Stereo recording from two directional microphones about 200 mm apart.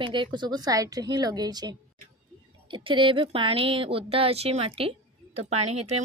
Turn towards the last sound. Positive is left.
turn(degrees=-30)  # may be behind; listen again after turning